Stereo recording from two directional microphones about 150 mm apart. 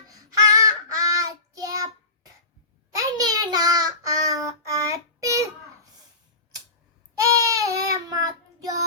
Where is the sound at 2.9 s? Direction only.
25° right (ahead or behind).